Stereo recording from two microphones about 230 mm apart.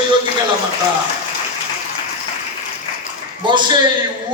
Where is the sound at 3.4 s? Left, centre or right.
Centre.